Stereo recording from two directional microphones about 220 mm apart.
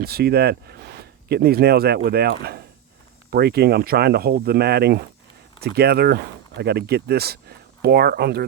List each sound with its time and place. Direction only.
0.0 s speech: 45° right (ahead or behind)